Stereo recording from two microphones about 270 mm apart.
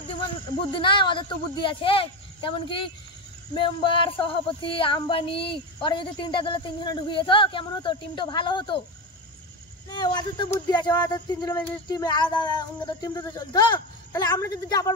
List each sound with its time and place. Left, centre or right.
0.7 s female singing: centre
9.8 s female singing: centre